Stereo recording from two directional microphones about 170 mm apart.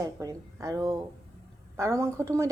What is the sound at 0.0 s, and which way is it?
A woman's voice, 20° right (ahead or behind).